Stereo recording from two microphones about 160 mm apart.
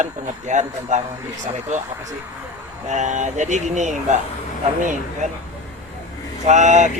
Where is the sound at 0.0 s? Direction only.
50° right (ahead or behind).